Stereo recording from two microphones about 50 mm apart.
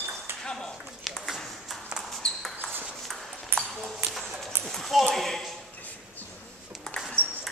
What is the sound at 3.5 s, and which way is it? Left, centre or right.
Ping, right.